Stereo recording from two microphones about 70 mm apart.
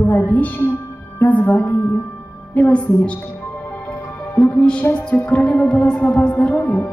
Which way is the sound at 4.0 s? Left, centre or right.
Left.